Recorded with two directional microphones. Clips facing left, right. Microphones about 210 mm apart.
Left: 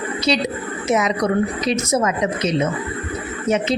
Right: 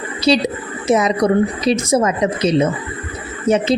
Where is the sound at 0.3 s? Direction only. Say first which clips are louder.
Right 6 dB; 35° right (ahead or behind).